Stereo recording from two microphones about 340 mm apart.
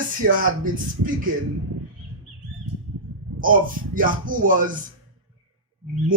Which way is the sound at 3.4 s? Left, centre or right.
Right.